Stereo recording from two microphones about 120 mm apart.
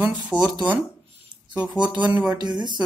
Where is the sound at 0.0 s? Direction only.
10° right (ahead or behind).